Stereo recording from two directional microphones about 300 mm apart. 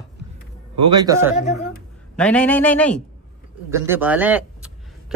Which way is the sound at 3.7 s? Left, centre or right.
Centre.